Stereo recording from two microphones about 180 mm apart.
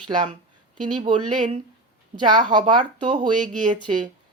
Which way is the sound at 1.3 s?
45° right (ahead or behind).